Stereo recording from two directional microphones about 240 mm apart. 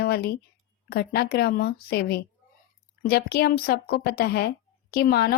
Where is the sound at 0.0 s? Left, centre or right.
Left.